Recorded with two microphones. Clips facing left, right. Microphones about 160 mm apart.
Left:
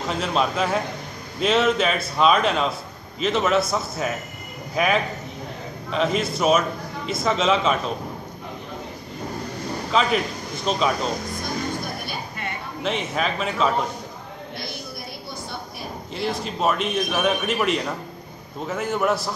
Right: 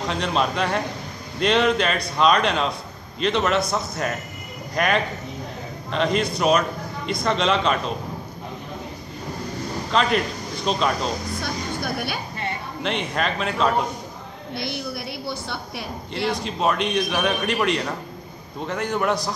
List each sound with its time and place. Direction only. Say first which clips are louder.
0.1 s a man's voice: left 1 dB; centre (ahead or behind)
9.8 s a man's voice: even; 5° left (ahead or behind)
12.8 s a man's voice: even; 5° left (ahead or behind)
15.2 s a sound: right 3 dB; 75° right (ahead or behind)
16.3 s a man's voice: left 1 dB; centre (ahead or behind)